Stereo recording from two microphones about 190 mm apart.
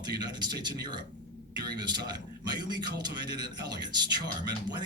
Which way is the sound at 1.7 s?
20° right (ahead or behind).